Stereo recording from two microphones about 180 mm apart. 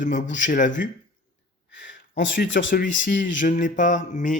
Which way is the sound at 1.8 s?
85° left.